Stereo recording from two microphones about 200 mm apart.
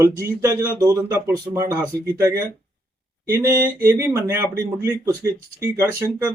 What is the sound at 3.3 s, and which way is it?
Speech, 15° right (ahead or behind).